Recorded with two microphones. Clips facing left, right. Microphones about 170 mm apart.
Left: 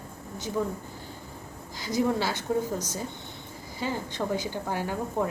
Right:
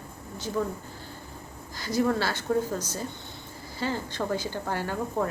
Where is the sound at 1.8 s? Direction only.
15° left (ahead or behind).